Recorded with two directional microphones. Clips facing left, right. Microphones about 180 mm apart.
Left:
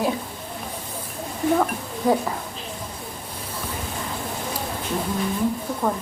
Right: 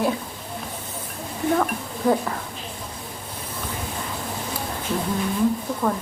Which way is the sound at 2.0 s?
15° left (ahead or behind).